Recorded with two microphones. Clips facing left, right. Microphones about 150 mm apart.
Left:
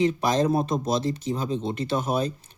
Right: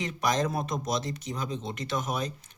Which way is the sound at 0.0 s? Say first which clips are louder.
Left 6 dB; 30° left (ahead or behind).